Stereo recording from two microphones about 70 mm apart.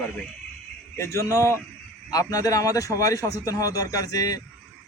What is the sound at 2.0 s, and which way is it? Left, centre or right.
A man's voice, left.